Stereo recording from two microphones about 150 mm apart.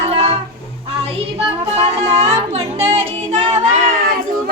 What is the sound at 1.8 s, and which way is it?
Music, 45° right (ahead or behind).